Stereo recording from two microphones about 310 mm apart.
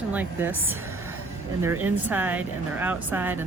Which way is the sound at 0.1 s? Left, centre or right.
Centre.